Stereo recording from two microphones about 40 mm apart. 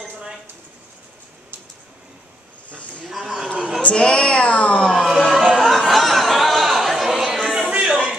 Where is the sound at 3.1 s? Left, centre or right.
Centre.